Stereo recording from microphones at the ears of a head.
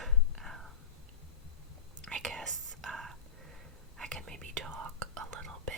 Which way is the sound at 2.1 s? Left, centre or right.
Right.